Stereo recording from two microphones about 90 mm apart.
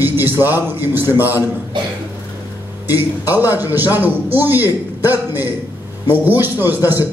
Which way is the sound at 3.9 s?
20° right (ahead or behind).